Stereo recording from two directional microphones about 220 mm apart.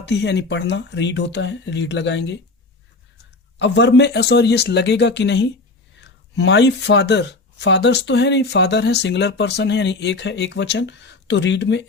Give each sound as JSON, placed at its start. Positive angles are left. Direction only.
{"t": 0.0, "sound": "speech", "side_deg": 50}
{"t": 3.6, "sound": "speech", "side_deg": 50}